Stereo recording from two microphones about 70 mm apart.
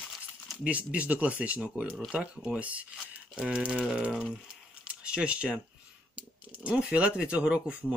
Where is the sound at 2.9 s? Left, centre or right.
Centre.